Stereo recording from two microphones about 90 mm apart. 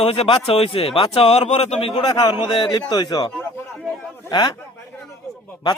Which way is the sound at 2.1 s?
55° left (ahead or behind).